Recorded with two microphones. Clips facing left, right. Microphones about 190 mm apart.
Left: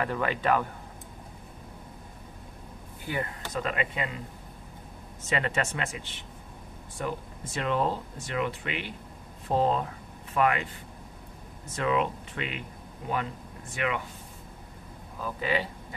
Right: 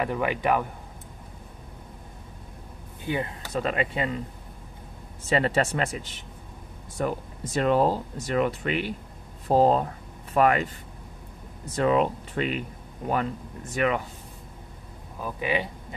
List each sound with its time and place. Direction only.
0.0 s speech: 15° right (ahead or behind)
3.1 s speech: 25° right (ahead or behind)
5.2 s speech: 35° right (ahead or behind)
11.7 s speech: 35° right (ahead or behind)
15.1 s speech: 15° right (ahead or behind)